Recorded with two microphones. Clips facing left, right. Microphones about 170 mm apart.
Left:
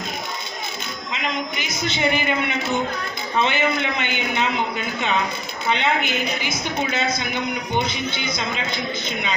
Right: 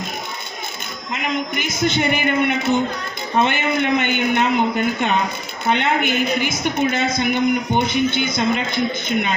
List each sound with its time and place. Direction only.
1.1 s a woman's voice: 50° right (ahead or behind)